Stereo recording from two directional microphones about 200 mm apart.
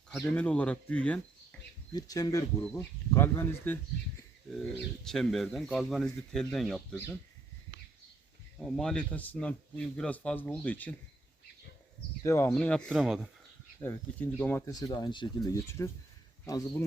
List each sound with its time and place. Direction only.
0.1 s speech: 10° left (ahead or behind)
1.5 s a sound: 5° left (ahead or behind)
1.9 s speech: 20° left (ahead or behind)
5.0 s speech: centre (ahead or behind)
8.5 s speech: centre (ahead or behind)
12.2 s speech: 15° left (ahead or behind); by 13.3 s 5° right (ahead or behind)
13.8 s speech: 10° left (ahead or behind)
14.7 s speech: 20° left (ahead or behind)